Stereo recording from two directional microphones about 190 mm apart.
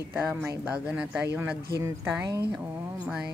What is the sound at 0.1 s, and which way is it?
Speech, 10° right (ahead or behind).